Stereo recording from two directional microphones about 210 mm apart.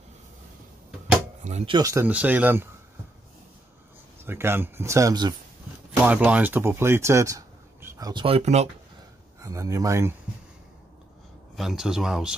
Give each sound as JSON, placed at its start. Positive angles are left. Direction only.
{"t": 1.4, "sound": "speech", "side_deg": -30}
{"t": 1.8, "sound": "speech", "side_deg": -15}
{"t": 4.3, "sound": "speech", "side_deg": -10}
{"t": 5.9, "sound": "speech", "side_deg": -5}
{"t": 9.4, "sound": "speech", "side_deg": -15}
{"t": 11.5, "sound": "speech", "side_deg": 0}